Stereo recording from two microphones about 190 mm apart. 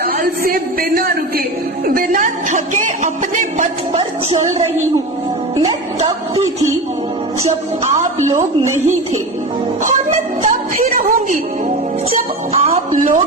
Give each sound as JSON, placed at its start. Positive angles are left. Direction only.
{"t": 0.0, "sound": "speech", "side_deg": -50}
{"t": 6.1, "sound": "a woman's voice", "side_deg": -20}
{"t": 8.3, "sound": "a woman's voice", "side_deg": -15}
{"t": 9.8, "sound": "music", "side_deg": -45}
{"t": 12.5, "sound": "a sound", "side_deg": -35}